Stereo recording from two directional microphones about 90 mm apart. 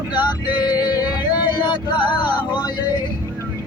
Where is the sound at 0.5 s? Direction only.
50° left (ahead or behind).